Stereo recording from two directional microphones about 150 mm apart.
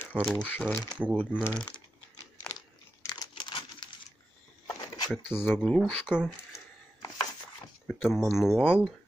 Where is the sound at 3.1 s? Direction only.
30° left (ahead or behind).